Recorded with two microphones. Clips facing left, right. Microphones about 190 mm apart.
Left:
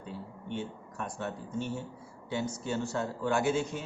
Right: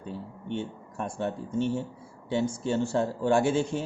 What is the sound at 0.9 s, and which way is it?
A man's voice, 25° right (ahead or behind).